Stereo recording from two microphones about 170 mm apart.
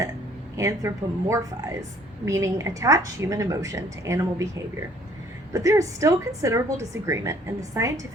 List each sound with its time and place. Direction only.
0.5 s a woman's voice: 15° right (ahead or behind)